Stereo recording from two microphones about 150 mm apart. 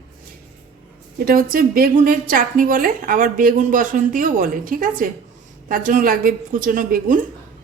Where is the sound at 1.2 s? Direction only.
75° right (ahead or behind).